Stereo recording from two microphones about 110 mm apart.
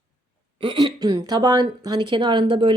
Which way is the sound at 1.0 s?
40° right (ahead or behind).